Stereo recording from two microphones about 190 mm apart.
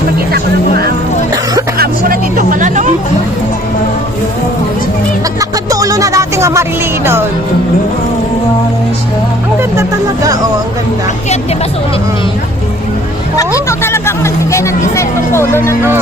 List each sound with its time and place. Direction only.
1.8 s music: 45° right (ahead or behind)
5.4 s music: 20° right (ahead or behind)
13.7 s speech: 15° left (ahead or behind)